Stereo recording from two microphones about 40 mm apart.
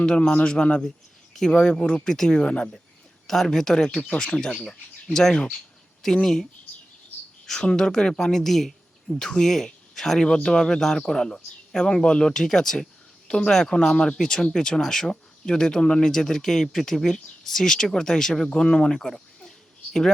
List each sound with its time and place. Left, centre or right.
0.0 s speech: left
0.9 s a sound: centre
1.5 s speech: left
3.2 s speech: centre
4.0 s speech: left
7.4 s speech: centre
9.1 s speech: centre
10.2 s speech: left
18.4 s speech: left
19.5 s a sound: centre